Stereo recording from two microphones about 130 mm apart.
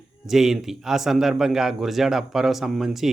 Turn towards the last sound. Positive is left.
turn(degrees=-5)  # may be behind; listen again after turning